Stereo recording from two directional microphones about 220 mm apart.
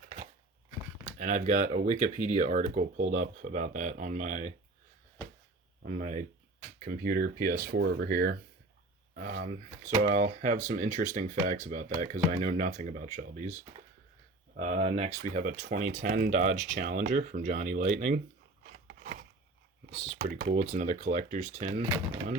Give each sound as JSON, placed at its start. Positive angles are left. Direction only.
{"t": 1.0, "sound": "speech", "side_deg": -35}
{"t": 5.8, "sound": "speech", "side_deg": -35}
{"t": 18.6, "sound": "scissors", "side_deg": -40}
{"t": 20.1, "sound": "speech", "side_deg": -35}